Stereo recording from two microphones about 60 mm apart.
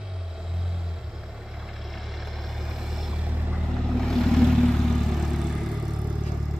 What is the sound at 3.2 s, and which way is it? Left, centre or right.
Boat, right.